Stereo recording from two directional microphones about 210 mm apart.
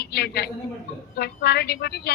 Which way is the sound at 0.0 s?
50° left (ahead or behind).